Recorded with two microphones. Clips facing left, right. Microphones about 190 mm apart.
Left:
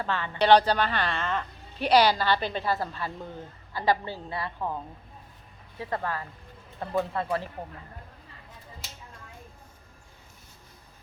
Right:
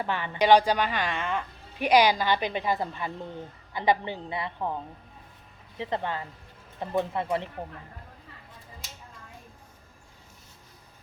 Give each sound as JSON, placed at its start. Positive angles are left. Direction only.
{"t": 0.0, "sound": "a woman's voice", "side_deg": -15}